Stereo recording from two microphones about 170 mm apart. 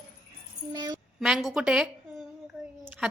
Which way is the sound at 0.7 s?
25° right (ahead or behind).